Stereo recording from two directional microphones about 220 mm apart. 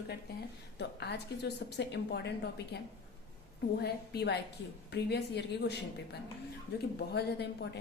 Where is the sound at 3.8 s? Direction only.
45° left (ahead or behind).